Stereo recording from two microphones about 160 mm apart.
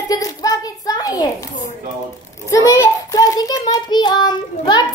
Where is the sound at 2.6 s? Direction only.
20° left (ahead or behind).